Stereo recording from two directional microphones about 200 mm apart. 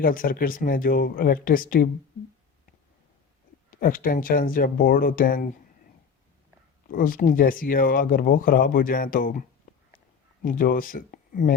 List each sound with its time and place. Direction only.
0.0 s speech: 45° left (ahead or behind)
3.7 s speech: 45° left (ahead or behind)
6.9 s speech: 45° left (ahead or behind)
10.4 s speech: 45° left (ahead or behind)